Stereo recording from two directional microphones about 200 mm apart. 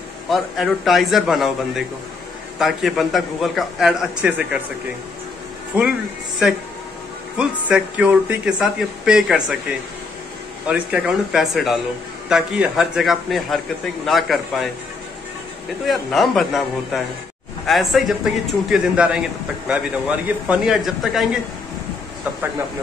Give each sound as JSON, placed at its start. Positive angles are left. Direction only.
{"t": 0.3, "sound": "speech", "side_deg": 0}
{"t": 7.3, "sound": "speech", "side_deg": -5}
{"t": 15.8, "sound": "speech", "side_deg": 0}
{"t": 20.2, "sound": "speech", "side_deg": -5}